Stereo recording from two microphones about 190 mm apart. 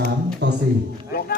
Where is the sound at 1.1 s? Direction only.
55° left (ahead or behind).